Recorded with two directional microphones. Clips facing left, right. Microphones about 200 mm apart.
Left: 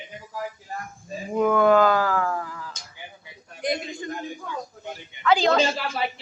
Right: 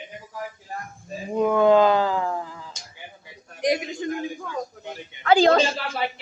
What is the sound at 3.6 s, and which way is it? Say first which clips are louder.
Speech: right 4 dB; 75° right (ahead or behind).